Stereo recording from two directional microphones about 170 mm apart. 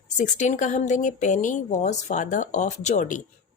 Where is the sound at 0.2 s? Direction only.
45° left (ahead or behind).